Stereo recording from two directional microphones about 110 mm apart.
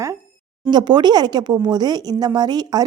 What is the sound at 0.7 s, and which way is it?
A woman's voice, 40° right (ahead or behind).